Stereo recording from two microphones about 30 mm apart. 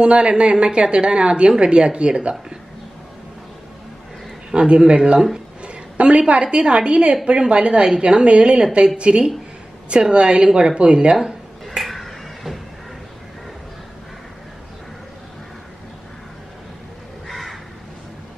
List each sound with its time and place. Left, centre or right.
0.0 s speech: right
4.6 s speech: right
5.6 s a sound: right
6.4 s speech: right
11.8 s a sound: centre
17.3 s crow: centre